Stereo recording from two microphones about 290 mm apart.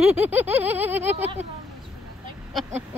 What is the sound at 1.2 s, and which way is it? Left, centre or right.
Speech, right.